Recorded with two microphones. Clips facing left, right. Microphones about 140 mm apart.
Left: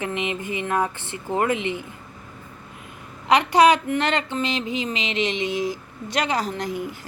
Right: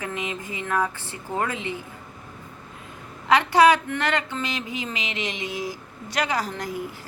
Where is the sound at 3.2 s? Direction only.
20° left (ahead or behind).